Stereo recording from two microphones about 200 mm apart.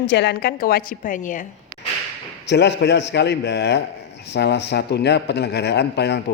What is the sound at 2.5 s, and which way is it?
A woman's voice, 60° left (ahead or behind).